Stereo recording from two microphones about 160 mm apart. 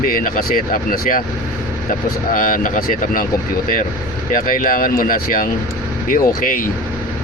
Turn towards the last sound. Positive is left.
turn(degrees=60)  # may be behind; listen again after turning